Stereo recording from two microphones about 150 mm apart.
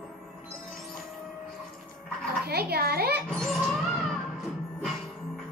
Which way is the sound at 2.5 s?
90° right.